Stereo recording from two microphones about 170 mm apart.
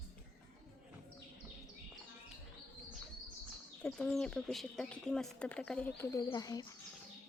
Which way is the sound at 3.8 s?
5° left (ahead or behind).